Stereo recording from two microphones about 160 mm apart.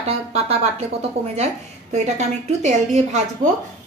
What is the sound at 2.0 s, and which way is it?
Speech, 45° right (ahead or behind).